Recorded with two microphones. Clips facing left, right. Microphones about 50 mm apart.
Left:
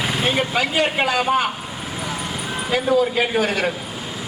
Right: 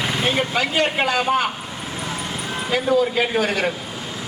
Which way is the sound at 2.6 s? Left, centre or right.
Centre.